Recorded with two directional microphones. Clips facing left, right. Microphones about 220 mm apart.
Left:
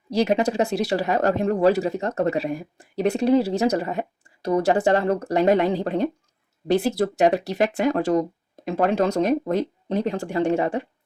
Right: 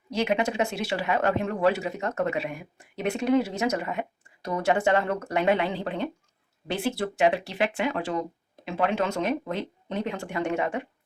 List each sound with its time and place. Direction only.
0.1 s speech: 35° left (ahead or behind)